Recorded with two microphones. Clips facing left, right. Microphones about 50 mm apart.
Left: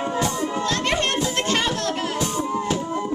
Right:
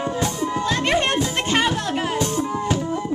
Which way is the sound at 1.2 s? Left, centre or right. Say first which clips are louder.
Right 2 dB; centre.